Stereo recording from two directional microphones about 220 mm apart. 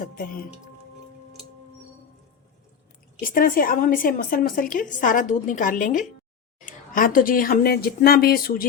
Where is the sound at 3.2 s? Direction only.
40° left (ahead or behind).